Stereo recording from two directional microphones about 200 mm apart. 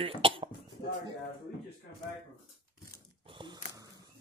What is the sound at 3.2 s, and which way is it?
Gasp, 25° right (ahead or behind).